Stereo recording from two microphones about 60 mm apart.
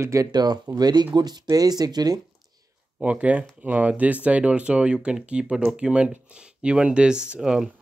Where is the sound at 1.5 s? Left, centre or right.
Right.